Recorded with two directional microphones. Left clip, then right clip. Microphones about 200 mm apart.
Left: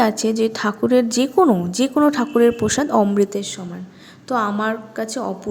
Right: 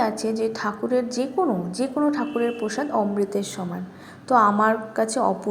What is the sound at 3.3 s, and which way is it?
A woman's voice, 20° left (ahead or behind).